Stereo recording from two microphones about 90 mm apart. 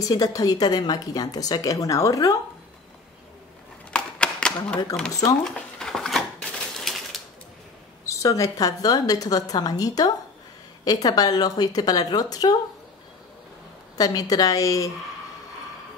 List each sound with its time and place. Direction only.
0.0 s a woman's voice: 45° left (ahead or behind)
3.9 s a sound: 10° left (ahead or behind)
4.9 s speech: 5° left (ahead or behind)
5.4 s a sound: 5° left (ahead or behind)
6.6 s typewriter: 5° left (ahead or behind)
8.0 s a woman's voice: 35° left (ahead or behind)
13.9 s a woman's voice: 45° left (ahead or behind)